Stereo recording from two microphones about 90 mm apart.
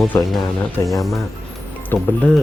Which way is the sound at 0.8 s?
35° left (ahead or behind).